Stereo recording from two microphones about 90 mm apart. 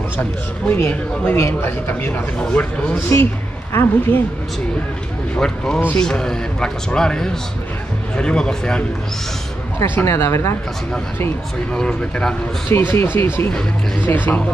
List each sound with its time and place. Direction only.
0.2 s speech: 20° left (ahead or behind)
5.3 s a man's voice: 5° left (ahead or behind)
9.8 s speech: 25° left (ahead or behind)
11.7 s a man's voice: 10° left (ahead or behind)
12.6 s speech: 25° left (ahead or behind)